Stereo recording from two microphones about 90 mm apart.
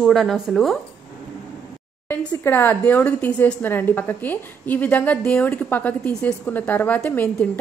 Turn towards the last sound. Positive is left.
turn(degrees=20)  # may be behind; listen again after turning